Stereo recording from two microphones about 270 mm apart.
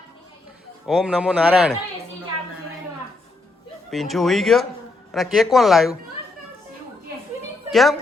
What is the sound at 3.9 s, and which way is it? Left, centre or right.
A man's voice, centre.